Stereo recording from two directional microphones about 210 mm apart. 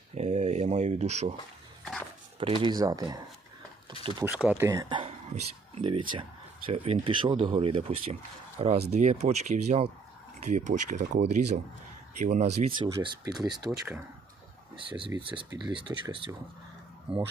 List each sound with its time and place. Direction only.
0.1 s speech: 35° right (ahead or behind)
1.8 s walk: centre (ahead or behind)
2.4 s speech: 25° right (ahead or behind)
4.3 s speech: 5° right (ahead or behind); by 12.5 s 35° right (ahead or behind)
12.6 s speech: 25° right (ahead or behind)
14.8 s speech: 25° right (ahead or behind)